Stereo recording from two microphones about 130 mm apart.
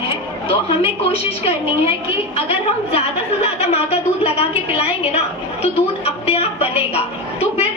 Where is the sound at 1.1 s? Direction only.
50° left (ahead or behind).